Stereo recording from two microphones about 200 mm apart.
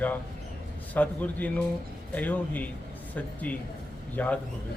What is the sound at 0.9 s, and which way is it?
A man's voice, 5° left (ahead or behind).